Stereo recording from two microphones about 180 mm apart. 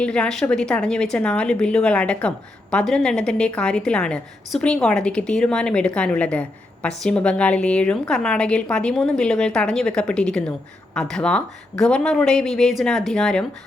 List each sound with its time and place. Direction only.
0.0 s a woman's voice: 5° left (ahead or behind)